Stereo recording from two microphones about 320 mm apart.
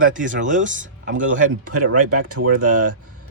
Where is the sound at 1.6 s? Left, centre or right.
Right.